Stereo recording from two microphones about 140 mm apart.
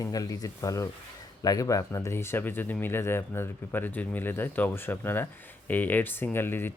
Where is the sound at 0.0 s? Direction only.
25° left (ahead or behind).